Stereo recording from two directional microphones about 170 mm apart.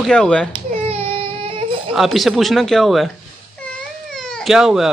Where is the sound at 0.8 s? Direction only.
35° right (ahead or behind).